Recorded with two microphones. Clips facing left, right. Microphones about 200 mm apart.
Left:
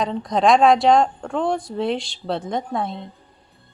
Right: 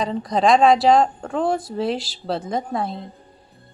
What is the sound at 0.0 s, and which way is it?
A woman's voice, centre (ahead or behind).